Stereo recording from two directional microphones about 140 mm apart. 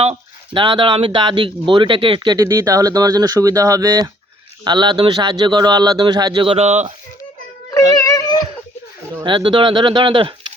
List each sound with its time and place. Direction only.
0.0 s speech: 40° right (ahead or behind)
8.0 s a sound: 25° left (ahead or behind)
9.2 s speech: 35° right (ahead or behind)